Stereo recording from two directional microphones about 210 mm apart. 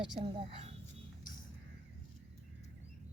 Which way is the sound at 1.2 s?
40° left (ahead or behind).